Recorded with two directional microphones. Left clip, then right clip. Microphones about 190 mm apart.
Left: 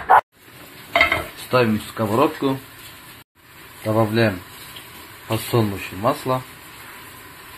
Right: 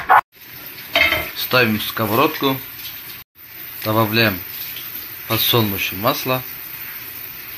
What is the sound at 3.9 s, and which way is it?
Speech, centre (ahead or behind).